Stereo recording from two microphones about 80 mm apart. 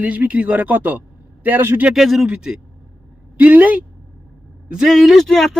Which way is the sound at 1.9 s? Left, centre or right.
Centre.